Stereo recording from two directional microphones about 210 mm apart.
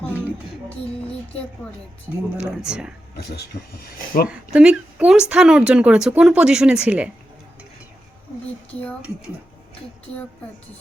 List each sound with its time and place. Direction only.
2.4 s speech: 5° right (ahead or behind)
3.3 s speech: 45° left (ahead or behind)
4.3 s speech: 5° right (ahead or behind)